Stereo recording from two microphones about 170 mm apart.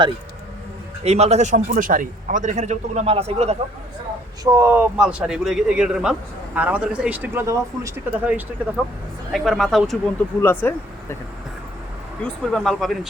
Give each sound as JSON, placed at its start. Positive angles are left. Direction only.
{"t": 1.0, "sound": "a man's voice", "side_deg": -40}
{"t": 4.5, "sound": "a man's voice", "side_deg": -15}
{"t": 10.4, "sound": "speech", "side_deg": 10}
{"t": 12.2, "sound": "speech", "side_deg": 0}